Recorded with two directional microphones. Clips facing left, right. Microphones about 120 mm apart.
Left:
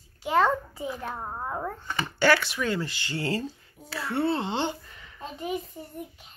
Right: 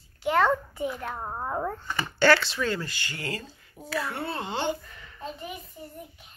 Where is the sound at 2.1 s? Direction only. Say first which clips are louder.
Right 1 dB; 10° left (ahead or behind).